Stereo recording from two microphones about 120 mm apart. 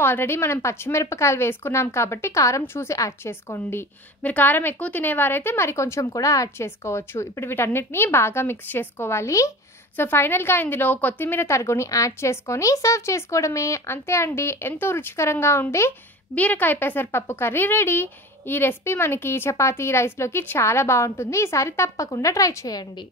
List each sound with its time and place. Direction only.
0.0 s speech: 20° left (ahead or behind)